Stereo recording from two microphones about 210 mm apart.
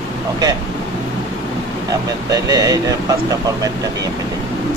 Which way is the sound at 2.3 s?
20° right (ahead or behind).